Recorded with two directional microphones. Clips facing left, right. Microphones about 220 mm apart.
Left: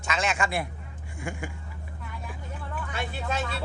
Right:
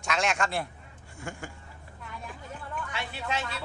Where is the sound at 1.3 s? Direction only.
15° left (ahead or behind).